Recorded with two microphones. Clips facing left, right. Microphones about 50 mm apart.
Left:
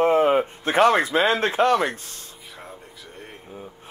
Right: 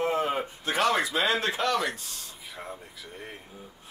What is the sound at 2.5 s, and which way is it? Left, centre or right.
Air conditioning, centre.